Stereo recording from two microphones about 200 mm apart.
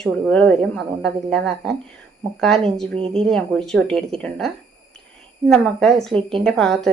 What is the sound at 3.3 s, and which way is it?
Speech, centre (ahead or behind).